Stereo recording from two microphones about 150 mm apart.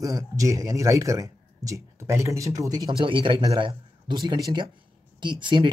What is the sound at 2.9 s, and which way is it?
A man's voice, 35° right (ahead or behind).